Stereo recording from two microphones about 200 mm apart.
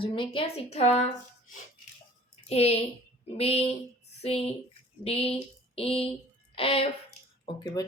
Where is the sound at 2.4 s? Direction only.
30° left (ahead or behind).